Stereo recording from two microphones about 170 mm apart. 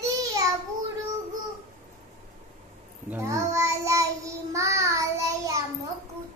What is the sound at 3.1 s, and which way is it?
Child singing, 15° right (ahead or behind).